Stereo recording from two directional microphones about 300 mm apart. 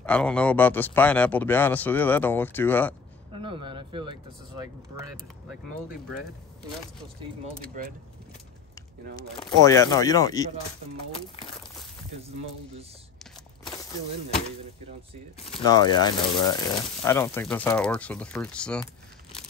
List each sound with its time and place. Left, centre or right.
0.0 s speech: centre
3.3 s speech: centre
7.6 s speech: right
9.1 s speech: centre
15.6 s speech: centre